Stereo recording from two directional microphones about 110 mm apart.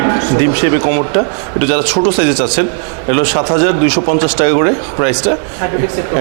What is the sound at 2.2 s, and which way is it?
Speech, 20° right (ahead or behind).